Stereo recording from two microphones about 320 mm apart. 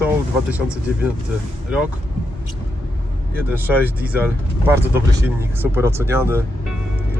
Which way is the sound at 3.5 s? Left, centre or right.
Centre.